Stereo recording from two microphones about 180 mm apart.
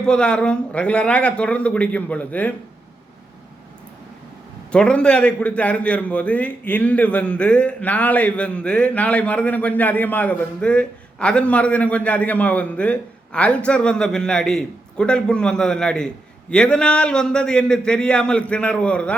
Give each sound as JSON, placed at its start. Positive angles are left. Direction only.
{"t": 0.0, "sound": "a man's voice", "side_deg": 5}
{"t": 4.7, "sound": "a man's voice", "side_deg": 5}